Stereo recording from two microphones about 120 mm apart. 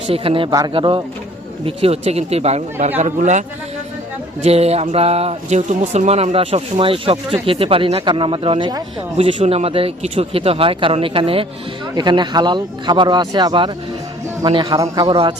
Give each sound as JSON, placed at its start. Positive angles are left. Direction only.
{"t": 0.1, "sound": "speech", "side_deg": -50}
{"t": 3.0, "sound": "a man's voice", "side_deg": -80}
{"t": 4.4, "sound": "speech", "side_deg": -60}
{"t": 9.1, "sound": "speech", "side_deg": -55}
{"t": 11.9, "sound": "a man's voice", "side_deg": -40}